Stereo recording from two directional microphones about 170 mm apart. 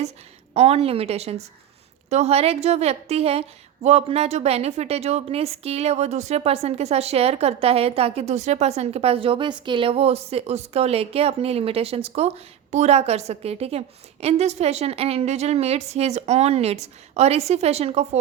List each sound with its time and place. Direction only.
0.5 s a woman's voice: 35° right (ahead or behind)